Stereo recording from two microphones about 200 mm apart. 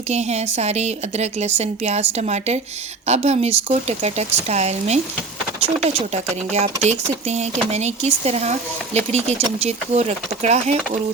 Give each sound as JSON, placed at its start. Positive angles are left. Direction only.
{"t": 0.1, "sound": "a woman's voice", "side_deg": -35}